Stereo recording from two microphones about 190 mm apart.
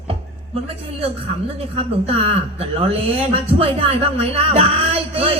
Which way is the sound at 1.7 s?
30° right (ahead or behind).